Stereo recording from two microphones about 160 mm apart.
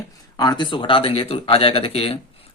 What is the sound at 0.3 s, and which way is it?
Speech, 25° left (ahead or behind).